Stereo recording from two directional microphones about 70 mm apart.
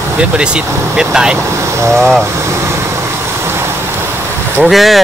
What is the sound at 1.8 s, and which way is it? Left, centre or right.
Speech, right.